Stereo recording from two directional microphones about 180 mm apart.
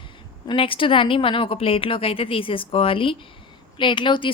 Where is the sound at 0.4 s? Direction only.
30° left (ahead or behind).